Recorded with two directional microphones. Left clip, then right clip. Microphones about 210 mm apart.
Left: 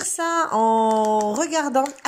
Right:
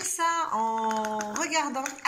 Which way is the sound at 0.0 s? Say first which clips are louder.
Left 4 dB; 35° left (ahead or behind).